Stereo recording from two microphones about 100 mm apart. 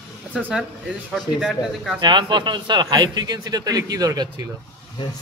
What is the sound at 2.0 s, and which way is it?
A man's voice, 50° right (ahead or behind).